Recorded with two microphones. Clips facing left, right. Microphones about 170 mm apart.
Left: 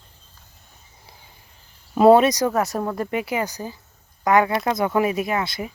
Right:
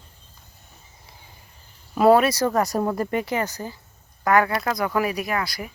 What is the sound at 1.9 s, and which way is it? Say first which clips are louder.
Speech: left 3 dB; 25° left (ahead or behind).